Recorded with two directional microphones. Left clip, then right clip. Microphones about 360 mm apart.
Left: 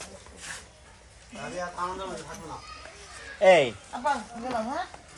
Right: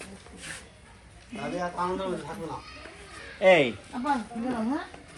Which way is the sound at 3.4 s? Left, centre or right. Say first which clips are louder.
Left 1 dB; left.